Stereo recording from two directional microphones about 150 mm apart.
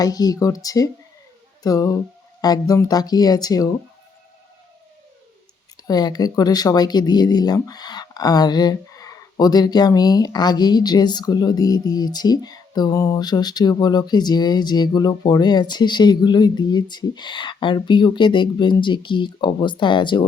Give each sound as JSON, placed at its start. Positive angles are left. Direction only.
{"t": 0.0, "sound": "speech", "side_deg": 25}
{"t": 5.7, "sound": "speech", "side_deg": 25}